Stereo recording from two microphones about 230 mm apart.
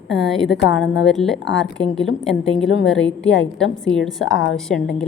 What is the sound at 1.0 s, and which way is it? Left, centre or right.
Speech, centre.